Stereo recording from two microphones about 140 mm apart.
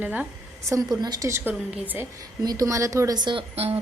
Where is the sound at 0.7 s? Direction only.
25° right (ahead or behind).